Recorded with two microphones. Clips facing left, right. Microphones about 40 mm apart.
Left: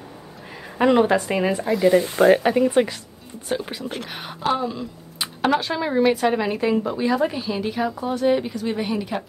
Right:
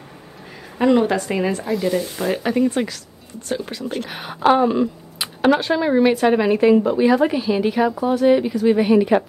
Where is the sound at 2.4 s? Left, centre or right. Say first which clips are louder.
Even; centre.